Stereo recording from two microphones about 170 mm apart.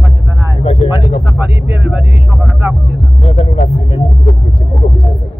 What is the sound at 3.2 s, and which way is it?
Music, 40° left (ahead or behind).